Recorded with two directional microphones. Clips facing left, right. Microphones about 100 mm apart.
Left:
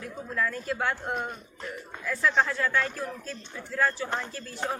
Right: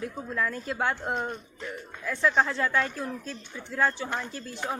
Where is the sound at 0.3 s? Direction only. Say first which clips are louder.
Left 1 dB; 25° right (ahead or behind).